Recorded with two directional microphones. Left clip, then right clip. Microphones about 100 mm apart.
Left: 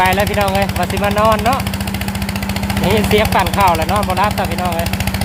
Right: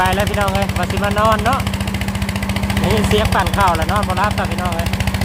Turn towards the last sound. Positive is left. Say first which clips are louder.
# left 2 dB
turn(degrees=35)  # may be behind; listen again after turning